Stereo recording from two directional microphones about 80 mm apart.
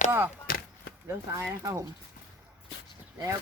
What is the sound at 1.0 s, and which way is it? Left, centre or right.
Speech, right.